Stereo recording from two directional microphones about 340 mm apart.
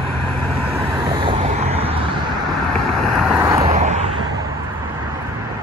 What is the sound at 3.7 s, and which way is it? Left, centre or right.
Vehicle, centre.